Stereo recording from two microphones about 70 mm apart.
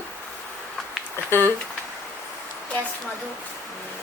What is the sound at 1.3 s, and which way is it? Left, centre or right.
Speech, left.